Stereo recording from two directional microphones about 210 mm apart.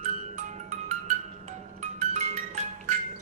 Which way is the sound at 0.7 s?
35° right (ahead or behind).